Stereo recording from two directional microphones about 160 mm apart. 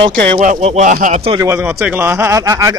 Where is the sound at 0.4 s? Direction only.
55° right (ahead or behind).